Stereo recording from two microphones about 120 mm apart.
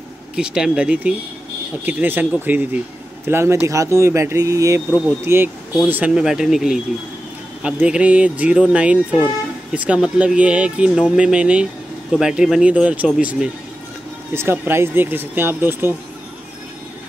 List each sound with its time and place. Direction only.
0.4 s speech: 5° right (ahead or behind)
7.8 s speech: 10° right (ahead or behind)
14.3 s speech: 20° right (ahead or behind)